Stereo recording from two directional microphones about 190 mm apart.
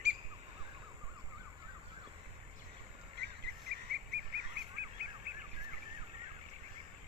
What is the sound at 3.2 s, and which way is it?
Cricket, 60° right (ahead or behind).